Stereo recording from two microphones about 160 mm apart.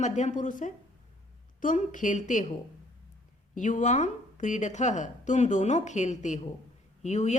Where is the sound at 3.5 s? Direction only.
50° left (ahead or behind).